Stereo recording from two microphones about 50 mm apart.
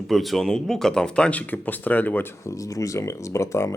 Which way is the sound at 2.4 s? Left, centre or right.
Left.